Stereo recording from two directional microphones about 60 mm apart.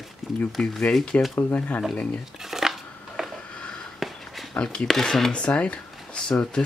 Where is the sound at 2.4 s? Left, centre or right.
Centre.